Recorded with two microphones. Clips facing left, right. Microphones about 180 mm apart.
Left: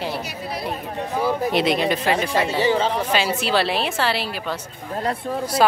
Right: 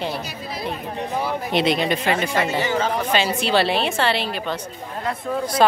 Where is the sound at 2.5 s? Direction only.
30° left (ahead or behind).